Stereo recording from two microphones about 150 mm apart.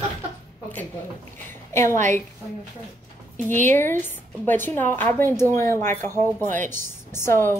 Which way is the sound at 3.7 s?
15° left (ahead or behind).